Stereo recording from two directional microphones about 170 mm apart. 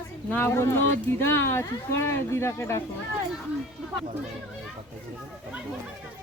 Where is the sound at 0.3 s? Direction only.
15° left (ahead or behind).